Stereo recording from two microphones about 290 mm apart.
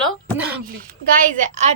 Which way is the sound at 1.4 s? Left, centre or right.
Right.